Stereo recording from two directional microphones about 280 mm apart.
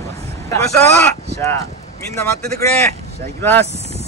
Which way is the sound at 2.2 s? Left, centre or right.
Centre.